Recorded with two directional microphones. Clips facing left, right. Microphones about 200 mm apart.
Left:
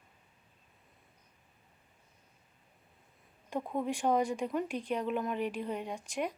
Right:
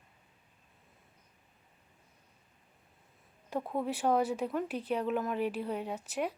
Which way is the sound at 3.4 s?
5° right (ahead or behind).